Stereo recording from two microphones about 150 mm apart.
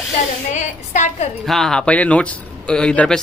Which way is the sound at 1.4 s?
5° left (ahead or behind).